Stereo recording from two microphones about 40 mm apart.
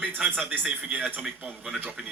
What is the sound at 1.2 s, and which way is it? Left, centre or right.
Speech, right.